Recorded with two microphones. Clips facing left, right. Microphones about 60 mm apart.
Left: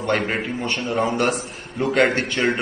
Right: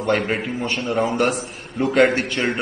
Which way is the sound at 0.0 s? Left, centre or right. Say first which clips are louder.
Right 1 dB; centre.